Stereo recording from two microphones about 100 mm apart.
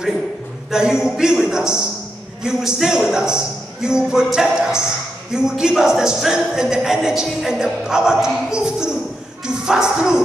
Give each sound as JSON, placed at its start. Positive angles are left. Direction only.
{"t": 0.7, "sound": "music", "side_deg": -5}